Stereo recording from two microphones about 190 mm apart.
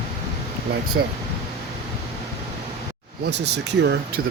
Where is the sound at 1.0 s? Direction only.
65° right (ahead or behind).